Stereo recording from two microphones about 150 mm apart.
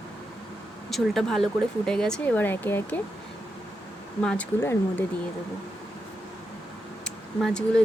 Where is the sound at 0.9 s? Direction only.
Centre (ahead or behind).